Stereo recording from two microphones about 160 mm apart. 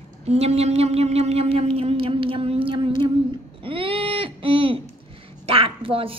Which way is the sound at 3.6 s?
35° right (ahead or behind).